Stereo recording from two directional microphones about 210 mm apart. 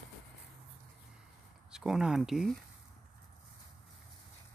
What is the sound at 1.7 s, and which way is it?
Speech, 5° right (ahead or behind).